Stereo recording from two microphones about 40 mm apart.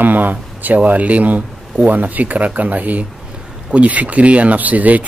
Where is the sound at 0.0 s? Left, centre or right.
Right.